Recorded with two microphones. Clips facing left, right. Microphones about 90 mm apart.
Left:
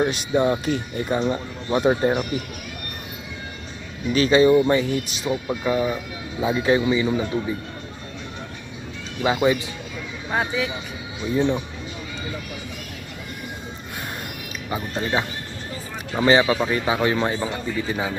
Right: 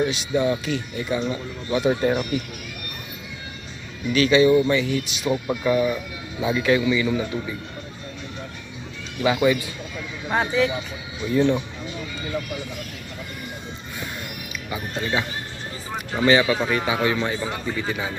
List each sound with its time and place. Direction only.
0.0 s speech: 50° left (ahead or behind)
4.1 s a man's voice: 35° left (ahead or behind)
5.6 s a man's voice: 25° left (ahead or behind)
9.2 s speech: 30° left (ahead or behind)
10.3 s speech: 10° left (ahead or behind)
14.7 s a man's voice: 30° left (ahead or behind)
16.2 s a man's voice: 30° left (ahead or behind)